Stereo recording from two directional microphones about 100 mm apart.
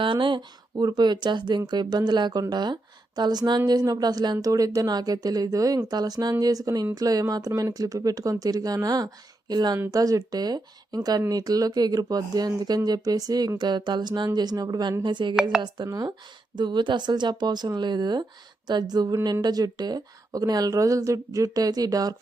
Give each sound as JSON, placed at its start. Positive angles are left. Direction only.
{"t": 0.0, "sound": "speech", "side_deg": -55}